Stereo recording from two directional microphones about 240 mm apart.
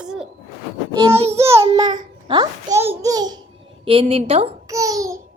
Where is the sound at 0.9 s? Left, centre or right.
Centre.